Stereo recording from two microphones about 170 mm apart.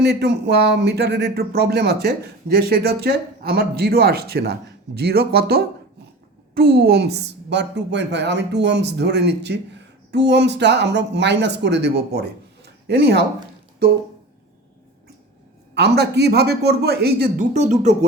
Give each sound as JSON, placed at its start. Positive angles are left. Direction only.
{"t": 0.0, "sound": "a woman's voice", "side_deg": -80}
{"t": 15.7, "sound": "speech", "side_deg": -75}
{"t": 17.5, "sound": "speech", "side_deg": -40}